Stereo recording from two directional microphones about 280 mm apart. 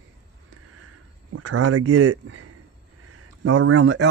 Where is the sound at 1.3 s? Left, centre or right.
Right.